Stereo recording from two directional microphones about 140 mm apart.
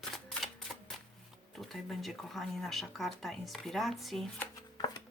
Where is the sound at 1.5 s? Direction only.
Centre (ahead or behind).